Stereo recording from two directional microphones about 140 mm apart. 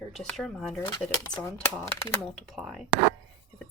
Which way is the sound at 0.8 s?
30° left (ahead or behind).